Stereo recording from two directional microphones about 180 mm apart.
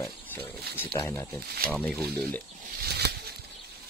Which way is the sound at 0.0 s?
10° left (ahead or behind).